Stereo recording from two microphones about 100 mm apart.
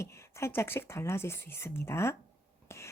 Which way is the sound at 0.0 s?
25° left (ahead or behind).